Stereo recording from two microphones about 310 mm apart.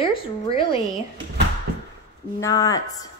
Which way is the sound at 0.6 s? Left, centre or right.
Centre.